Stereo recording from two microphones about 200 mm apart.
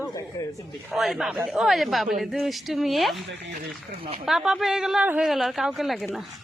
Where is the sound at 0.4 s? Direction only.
15° left (ahead or behind).